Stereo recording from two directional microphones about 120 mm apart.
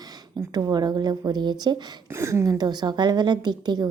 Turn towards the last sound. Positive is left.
turn(degrees=-35)  # may be behind; listen again after turning